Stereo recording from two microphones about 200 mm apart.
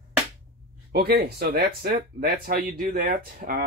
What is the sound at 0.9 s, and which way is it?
Speech, 50° right (ahead or behind).